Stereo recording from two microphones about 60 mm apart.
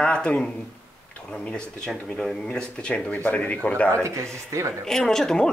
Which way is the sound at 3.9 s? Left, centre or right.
Right.